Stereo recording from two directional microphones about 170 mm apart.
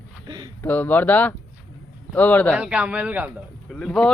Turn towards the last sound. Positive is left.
turn(degrees=5)  # may be behind; listen again after turning